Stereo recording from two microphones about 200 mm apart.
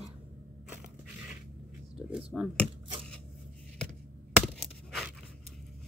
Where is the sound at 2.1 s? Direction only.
5° right (ahead or behind).